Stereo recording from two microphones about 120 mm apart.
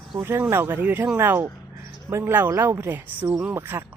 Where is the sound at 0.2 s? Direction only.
20° right (ahead or behind).